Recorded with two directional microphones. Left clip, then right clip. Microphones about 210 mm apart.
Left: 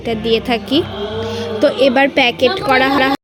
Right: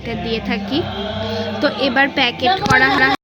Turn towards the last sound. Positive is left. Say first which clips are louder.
# even
turn(degrees=20)  # may be behind; listen again after turning